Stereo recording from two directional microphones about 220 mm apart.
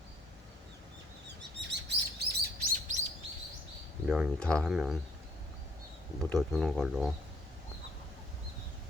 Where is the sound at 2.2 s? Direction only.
45° right (ahead or behind).